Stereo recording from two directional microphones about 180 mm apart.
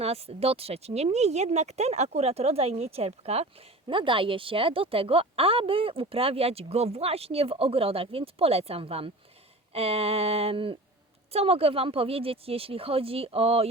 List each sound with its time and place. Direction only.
0.0 s speech: 35° right (ahead or behind)